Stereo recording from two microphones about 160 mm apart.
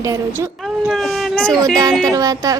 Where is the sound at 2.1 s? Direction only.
20° right (ahead or behind).